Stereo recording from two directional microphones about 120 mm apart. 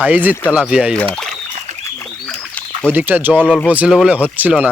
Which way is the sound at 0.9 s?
5° left (ahead or behind).